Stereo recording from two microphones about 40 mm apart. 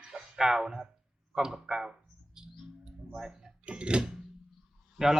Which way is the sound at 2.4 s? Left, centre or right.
Centre.